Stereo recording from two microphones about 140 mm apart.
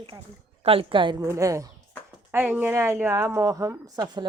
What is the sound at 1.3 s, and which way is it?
A woman's voice, 20° right (ahead or behind).